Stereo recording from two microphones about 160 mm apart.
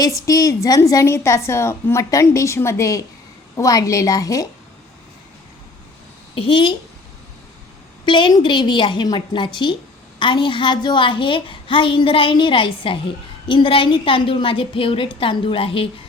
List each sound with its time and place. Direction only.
0.2 s a woman's voice: 20° left (ahead or behind)
6.3 s a woman's voice: 35° left (ahead or behind)
8.0 s a woman's voice: 30° left (ahead or behind)